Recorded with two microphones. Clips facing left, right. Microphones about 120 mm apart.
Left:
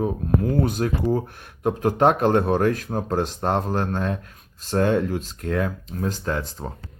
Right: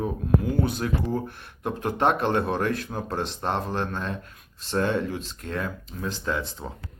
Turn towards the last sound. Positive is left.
turn(degrees=45)  # may be behind; listen again after turning